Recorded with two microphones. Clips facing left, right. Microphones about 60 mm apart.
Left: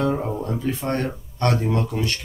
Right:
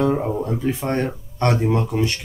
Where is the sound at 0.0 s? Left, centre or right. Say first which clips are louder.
Right 3 dB; centre.